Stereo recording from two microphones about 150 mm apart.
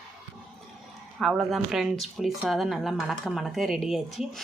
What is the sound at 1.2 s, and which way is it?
Speech, centre (ahead or behind).